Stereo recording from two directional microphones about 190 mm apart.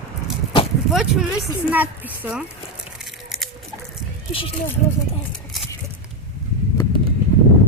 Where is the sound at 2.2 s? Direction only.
10° right (ahead or behind).